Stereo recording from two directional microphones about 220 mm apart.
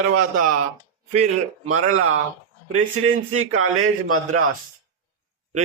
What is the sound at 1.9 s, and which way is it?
Speech, 70° right (ahead or behind).